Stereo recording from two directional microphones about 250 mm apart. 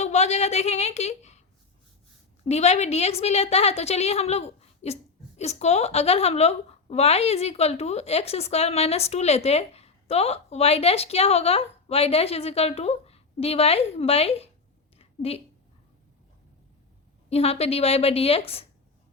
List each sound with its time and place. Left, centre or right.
0.0 s a woman's voice: left
2.4 s a woman's voice: left
14.9 s a sound: left
17.2 s a woman's voice: left